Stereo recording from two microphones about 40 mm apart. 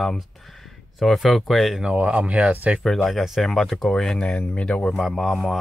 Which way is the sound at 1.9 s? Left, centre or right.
Right.